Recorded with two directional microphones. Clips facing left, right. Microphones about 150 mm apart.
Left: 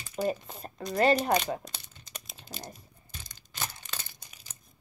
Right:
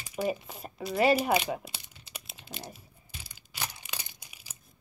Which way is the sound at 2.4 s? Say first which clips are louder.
Even; 5° right (ahead or behind).